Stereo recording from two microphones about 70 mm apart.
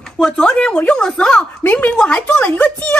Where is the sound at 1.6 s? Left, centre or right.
Left.